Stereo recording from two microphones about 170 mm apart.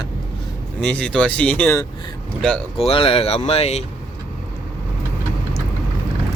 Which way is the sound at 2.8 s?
35° left (ahead or behind).